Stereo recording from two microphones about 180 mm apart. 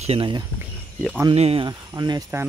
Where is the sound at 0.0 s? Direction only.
30° right (ahead or behind).